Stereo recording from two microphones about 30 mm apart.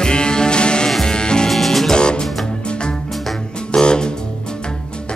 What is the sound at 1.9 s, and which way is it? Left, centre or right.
Music, left.